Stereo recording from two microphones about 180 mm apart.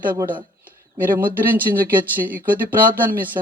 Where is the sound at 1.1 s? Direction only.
10° right (ahead or behind).